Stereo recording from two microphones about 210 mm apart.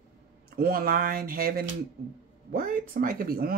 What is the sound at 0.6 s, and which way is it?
Speech, 45° right (ahead or behind).